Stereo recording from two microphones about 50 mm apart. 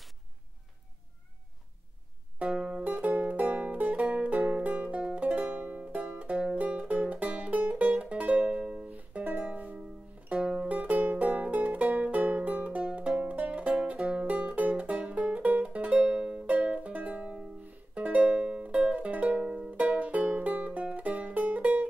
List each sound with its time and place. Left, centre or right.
2.3 s music: right
2.8 s music: right
8.8 s music: right
10.4 s music: centre
10.7 s music: right